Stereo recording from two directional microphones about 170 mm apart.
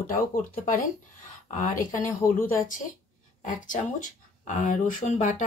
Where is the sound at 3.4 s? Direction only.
50° left (ahead or behind).